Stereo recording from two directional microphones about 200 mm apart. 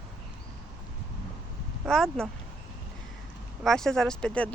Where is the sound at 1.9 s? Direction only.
Centre (ahead or behind).